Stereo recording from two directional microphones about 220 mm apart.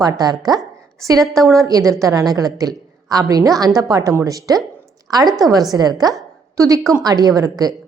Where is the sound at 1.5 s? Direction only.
15° right (ahead or behind).